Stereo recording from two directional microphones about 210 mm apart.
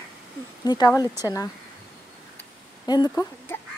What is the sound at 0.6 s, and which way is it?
Speech, 20° left (ahead or behind).